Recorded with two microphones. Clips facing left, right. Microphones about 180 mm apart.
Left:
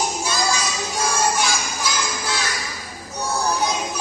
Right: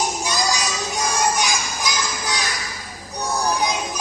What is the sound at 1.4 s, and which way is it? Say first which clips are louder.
Music: even; 15° right (ahead or behind).